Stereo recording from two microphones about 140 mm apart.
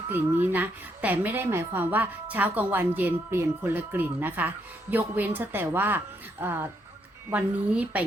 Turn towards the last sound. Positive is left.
turn(degrees=-10)  # may be behind; listen again after turning